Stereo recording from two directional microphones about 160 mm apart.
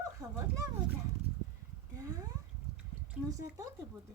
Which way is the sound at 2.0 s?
20° right (ahead or behind).